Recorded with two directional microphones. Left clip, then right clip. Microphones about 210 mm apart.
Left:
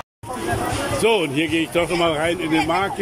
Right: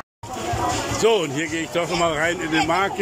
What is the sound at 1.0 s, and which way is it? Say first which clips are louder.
Speech: left 1 dB; 5° left (ahead or behind).